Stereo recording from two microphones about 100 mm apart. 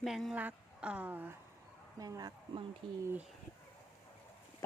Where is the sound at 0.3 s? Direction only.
15° right (ahead or behind).